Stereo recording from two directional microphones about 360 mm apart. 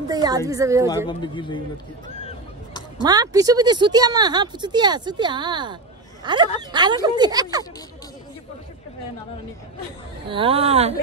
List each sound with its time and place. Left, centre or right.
0.1 s speech: centre
0.8 s a man's voice: centre
3.0 s speech: centre
10.3 s speech: centre